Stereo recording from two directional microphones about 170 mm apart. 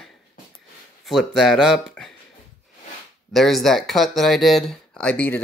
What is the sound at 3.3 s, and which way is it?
Speech, centre (ahead or behind).